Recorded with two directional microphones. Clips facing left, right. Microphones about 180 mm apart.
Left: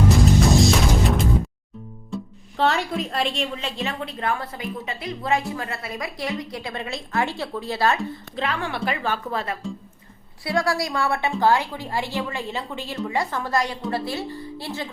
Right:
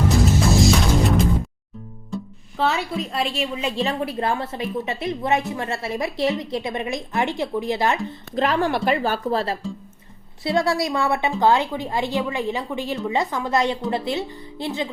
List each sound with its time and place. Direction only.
0.5 s music: centre (ahead or behind)
2.0 s speech: centre (ahead or behind)
3.8 s a woman's voice: 30° right (ahead or behind)
8.4 s a woman's voice: 40° right (ahead or behind)
10.4 s a woman's voice: 20° right (ahead or behind)